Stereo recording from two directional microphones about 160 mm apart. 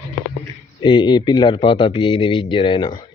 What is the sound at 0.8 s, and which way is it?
Speech, 30° left (ahead or behind).